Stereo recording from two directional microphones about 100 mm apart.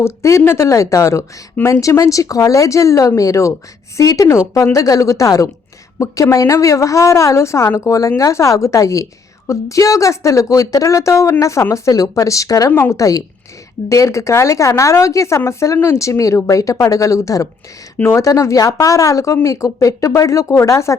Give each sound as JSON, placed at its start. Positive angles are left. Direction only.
{"t": 0.0, "sound": "a woman's voice", "side_deg": 30}
{"t": 17.9, "sound": "speech", "side_deg": 15}
{"t": 18.2, "sound": "a woman's voice", "side_deg": 30}